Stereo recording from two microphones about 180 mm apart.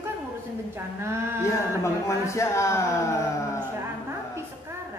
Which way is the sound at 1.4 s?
15° left (ahead or behind).